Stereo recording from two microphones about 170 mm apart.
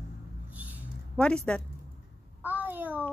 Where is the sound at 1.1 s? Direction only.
5° left (ahead or behind).